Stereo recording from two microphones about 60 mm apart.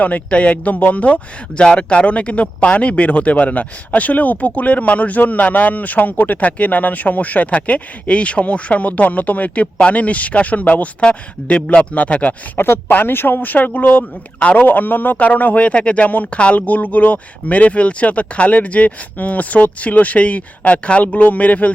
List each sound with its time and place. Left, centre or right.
0.0 s speech: left
12.5 s speech: left
12.9 s speech: left